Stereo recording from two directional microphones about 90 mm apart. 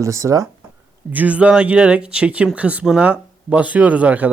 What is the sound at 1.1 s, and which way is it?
Speech, 15° right (ahead or behind).